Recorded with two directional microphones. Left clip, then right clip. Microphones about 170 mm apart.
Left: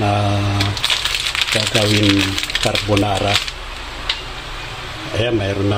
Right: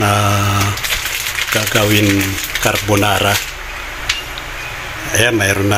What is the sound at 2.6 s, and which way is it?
Speech, 15° right (ahead or behind).